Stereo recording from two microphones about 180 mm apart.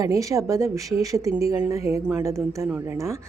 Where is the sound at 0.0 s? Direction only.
20° right (ahead or behind).